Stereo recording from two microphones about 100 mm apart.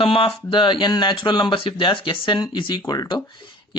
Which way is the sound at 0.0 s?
65° left (ahead or behind).